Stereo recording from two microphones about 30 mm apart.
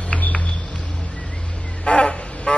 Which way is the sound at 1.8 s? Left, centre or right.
Left.